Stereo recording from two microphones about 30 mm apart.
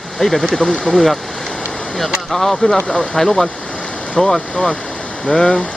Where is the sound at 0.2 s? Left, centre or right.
Centre.